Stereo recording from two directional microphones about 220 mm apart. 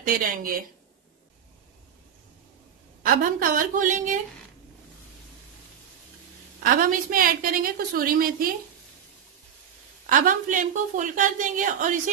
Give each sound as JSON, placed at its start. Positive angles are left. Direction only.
{"t": 0.0, "sound": "a woman's voice", "side_deg": -40}
{"t": 3.0, "sound": "a woman's voice", "side_deg": -40}
{"t": 6.6, "sound": "a woman's voice", "side_deg": -40}
{"t": 10.0, "sound": "a woman's voice", "side_deg": -35}